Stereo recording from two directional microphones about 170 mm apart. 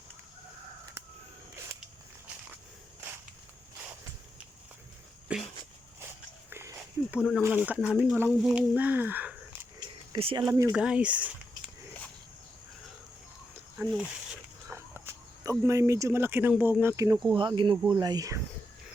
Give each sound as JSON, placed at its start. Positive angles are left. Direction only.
{"t": 5.3, "sound": "a sound", "side_deg": -5}
{"t": 6.5, "sound": "dog", "side_deg": -15}
{"t": 7.4, "sound": "speech", "side_deg": -10}
{"t": 10.1, "sound": "speech", "side_deg": -30}
{"t": 10.4, "sound": "speech", "side_deg": -15}
{"t": 10.8, "sound": "speech", "side_deg": -5}
{"t": 13.7, "sound": "speech", "side_deg": -5}
{"t": 17.3, "sound": "speech", "side_deg": -25}